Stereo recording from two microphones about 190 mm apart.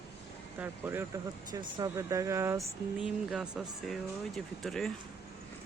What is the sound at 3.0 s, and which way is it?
Speech, 5° right (ahead or behind).